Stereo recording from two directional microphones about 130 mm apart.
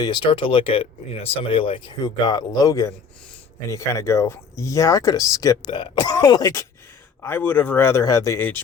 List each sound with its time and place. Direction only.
0.0 s speech: 40° left (ahead or behind); by 5.5 s 25° left (ahead or behind)
5.6 s cough: 35° left (ahead or behind)
7.2 s a man's voice: 15° left (ahead or behind)